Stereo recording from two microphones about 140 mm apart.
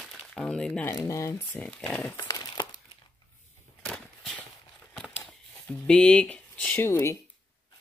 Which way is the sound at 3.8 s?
5° left (ahead or behind).